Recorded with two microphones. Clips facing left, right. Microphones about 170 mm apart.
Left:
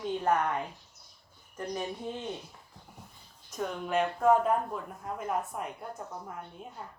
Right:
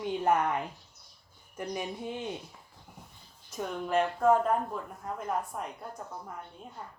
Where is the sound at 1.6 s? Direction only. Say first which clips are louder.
Even; 10° right (ahead or behind).